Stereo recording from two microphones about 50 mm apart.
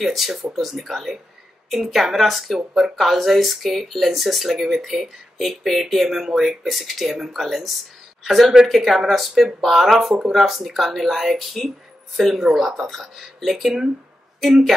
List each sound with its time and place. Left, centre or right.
0.0 s speech: centre